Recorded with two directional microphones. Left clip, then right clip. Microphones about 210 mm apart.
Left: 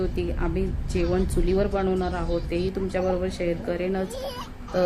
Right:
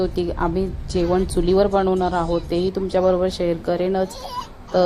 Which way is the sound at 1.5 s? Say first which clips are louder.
Right 8 dB; 15° right (ahead or behind).